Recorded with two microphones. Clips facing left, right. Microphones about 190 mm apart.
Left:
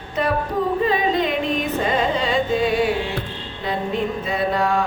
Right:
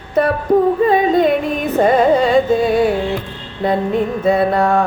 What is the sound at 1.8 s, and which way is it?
Music, 50° right (ahead or behind).